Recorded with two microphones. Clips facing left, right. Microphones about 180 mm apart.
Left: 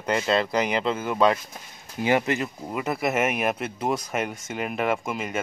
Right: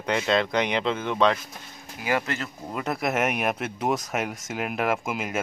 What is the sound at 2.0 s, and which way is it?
Speech, 20° left (ahead or behind).